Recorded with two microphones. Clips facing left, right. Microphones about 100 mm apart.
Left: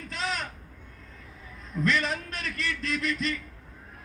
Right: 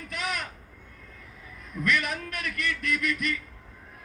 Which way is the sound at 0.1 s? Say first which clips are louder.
Left 1 dB; 30° left (ahead or behind).